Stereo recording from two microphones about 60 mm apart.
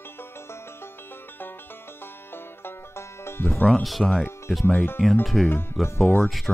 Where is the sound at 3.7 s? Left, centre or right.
Centre.